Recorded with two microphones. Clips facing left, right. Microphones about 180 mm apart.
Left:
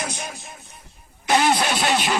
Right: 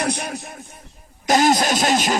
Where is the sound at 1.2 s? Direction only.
40° right (ahead or behind).